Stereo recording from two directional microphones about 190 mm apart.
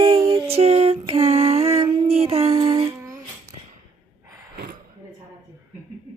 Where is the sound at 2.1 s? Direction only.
30° right (ahead or behind).